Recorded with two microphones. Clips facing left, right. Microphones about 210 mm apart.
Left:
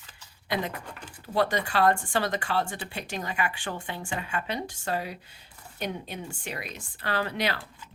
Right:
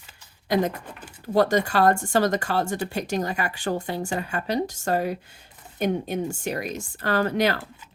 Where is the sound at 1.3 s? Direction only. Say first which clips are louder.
Right 5 dB; 45° right (ahead or behind).